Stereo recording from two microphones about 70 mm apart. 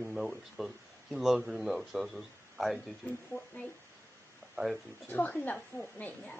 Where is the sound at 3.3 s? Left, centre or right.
Left.